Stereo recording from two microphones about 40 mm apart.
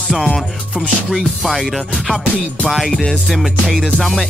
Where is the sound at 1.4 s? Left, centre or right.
Centre.